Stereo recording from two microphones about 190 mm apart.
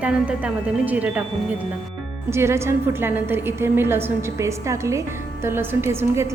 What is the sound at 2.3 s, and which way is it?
A woman's voice, 15° right (ahead or behind).